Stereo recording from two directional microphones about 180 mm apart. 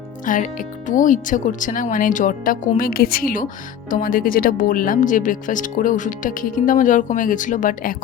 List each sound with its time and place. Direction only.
0.3 s speech: 45° left (ahead or behind)